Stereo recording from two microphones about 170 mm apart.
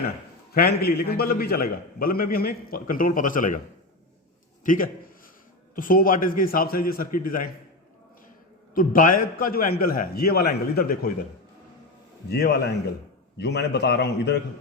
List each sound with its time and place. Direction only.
0.5 s a man's voice: 65° left (ahead or behind)
4.6 s a man's voice: 50° left (ahead or behind)
8.7 s a man's voice: 55° left (ahead or behind)
12.3 s a man's voice: 70° left (ahead or behind)
13.3 s a man's voice: 90° left